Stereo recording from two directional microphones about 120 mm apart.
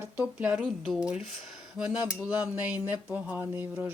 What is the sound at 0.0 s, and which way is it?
Speech, 15° right (ahead or behind).